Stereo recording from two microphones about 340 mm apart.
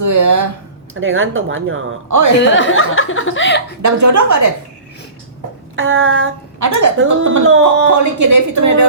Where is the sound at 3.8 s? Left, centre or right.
Right.